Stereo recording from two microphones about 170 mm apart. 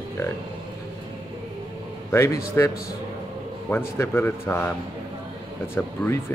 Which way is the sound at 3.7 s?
10° left (ahead or behind).